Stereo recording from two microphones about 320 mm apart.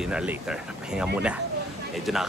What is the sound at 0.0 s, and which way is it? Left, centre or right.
Speech, centre.